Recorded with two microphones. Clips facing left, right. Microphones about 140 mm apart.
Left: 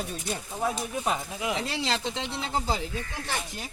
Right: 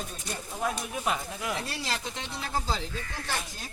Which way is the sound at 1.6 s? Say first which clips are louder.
Left 5 dB; 90° left.